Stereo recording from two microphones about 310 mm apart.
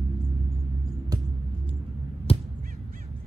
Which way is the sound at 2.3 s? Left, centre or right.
Centre.